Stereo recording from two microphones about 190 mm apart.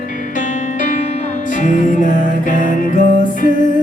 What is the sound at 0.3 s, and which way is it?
Music, 45° left (ahead or behind).